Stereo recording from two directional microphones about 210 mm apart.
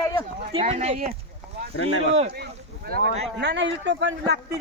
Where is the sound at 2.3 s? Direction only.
50° right (ahead or behind).